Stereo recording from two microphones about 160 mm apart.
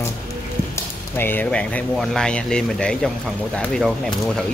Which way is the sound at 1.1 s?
15° left (ahead or behind).